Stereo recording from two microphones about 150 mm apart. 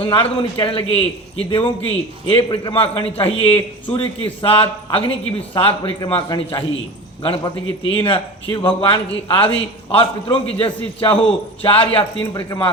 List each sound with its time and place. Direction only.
0.0 s a man's voice: 35° left (ahead or behind)
12.2 s speech: 20° left (ahead or behind)